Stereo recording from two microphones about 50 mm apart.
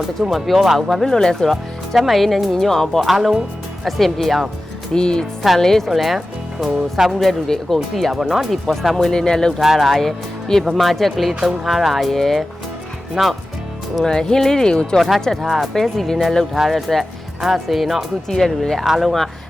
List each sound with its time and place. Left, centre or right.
0.2 s speech: centre
3.1 s speech: centre
4.9 s speech: centre
5.5 s speech: centre
7.3 s speech: centre
9.1 s speech: centre
9.6 s speech: centre
14.0 s speech: centre
15.4 s speech: centre
18.3 s speech: centre
18.9 s speech: centre